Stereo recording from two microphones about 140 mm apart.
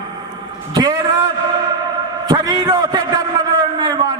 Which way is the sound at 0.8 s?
30° right (ahead or behind).